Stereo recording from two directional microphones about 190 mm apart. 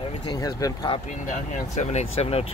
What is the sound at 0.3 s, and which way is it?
Speech, 20° left (ahead or behind).